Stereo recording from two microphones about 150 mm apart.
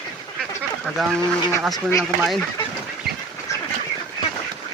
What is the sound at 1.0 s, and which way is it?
Speech, centre (ahead or behind).